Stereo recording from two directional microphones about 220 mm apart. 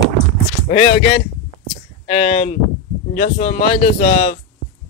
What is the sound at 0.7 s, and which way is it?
Speech, 30° left (ahead or behind).